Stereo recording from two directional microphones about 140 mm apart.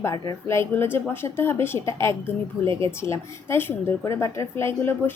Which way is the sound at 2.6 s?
40° right (ahead or behind).